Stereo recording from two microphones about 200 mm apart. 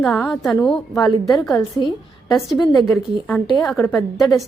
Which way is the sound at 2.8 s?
Centre (ahead or behind).